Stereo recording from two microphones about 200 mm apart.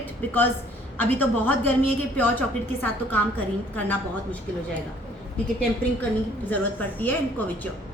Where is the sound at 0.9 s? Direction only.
10° left (ahead or behind).